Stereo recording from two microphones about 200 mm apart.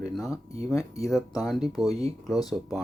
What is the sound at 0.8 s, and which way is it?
Speech, 15° left (ahead or behind).